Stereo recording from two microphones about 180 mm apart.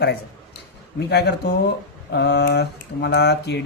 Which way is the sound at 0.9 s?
65° left (ahead or behind).